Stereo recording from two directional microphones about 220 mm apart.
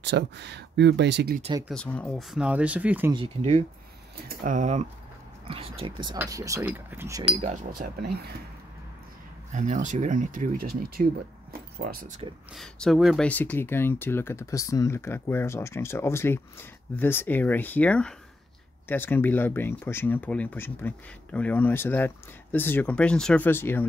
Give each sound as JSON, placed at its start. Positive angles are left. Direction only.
{"t": 0.0, "sound": "speech", "side_deg": -50}
{"t": 1.7, "sound": "speech", "side_deg": 5}
{"t": 3.2, "sound": "speech", "side_deg": -30}
{"t": 7.3, "sound": "speech", "side_deg": -30}
{"t": 9.5, "sound": "speech", "side_deg": -35}
{"t": 12.5, "sound": "speech", "side_deg": 0}